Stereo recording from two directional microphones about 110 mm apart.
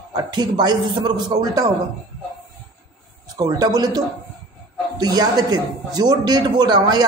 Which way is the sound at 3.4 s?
35° right (ahead or behind).